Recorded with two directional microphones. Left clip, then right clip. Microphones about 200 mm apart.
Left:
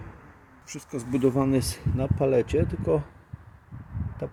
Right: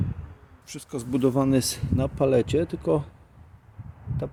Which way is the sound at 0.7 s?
15° right (ahead or behind).